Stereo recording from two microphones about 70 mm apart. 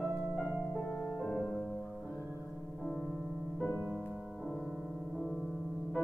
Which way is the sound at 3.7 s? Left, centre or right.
Right.